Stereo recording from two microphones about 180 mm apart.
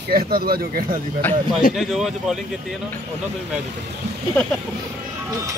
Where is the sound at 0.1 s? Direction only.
55° right (ahead or behind).